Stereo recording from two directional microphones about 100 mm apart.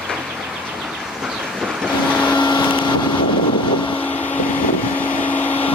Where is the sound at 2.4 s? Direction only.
50° left (ahead or behind).